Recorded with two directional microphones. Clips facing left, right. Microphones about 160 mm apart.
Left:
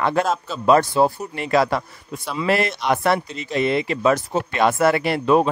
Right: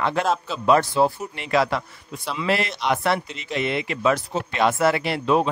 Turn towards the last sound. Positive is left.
turn(degrees=50)  # may be behind; listen again after turning